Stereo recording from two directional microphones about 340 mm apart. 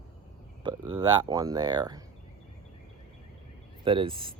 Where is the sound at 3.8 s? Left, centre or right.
Centre.